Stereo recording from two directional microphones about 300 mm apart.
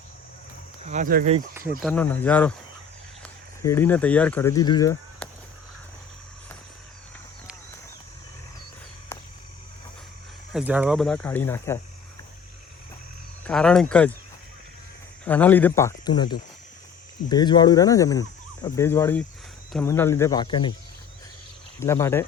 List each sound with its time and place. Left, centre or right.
0.9 s speech: right
1.8 s speech: centre
3.6 s speech: centre
10.5 s speech: centre
13.4 s speech: centre
15.2 s speech: centre
21.8 s speech: centre